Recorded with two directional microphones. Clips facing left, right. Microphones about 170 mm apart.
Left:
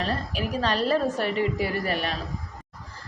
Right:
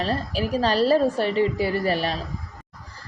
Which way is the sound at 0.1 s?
35° right (ahead or behind).